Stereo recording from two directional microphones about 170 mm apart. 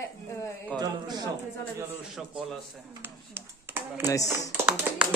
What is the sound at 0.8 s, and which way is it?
Speech, 20° right (ahead or behind).